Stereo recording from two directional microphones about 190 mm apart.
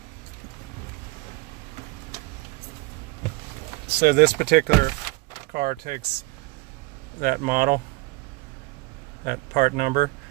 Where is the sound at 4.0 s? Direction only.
55° right (ahead or behind).